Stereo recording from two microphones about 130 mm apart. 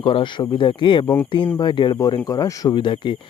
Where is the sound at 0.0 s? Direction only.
40° left (ahead or behind).